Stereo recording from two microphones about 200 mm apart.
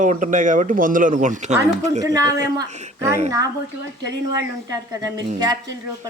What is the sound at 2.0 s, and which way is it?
Speech, 15° right (ahead or behind).